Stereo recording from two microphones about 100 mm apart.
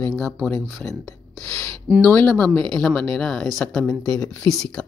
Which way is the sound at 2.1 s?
20° left (ahead or behind).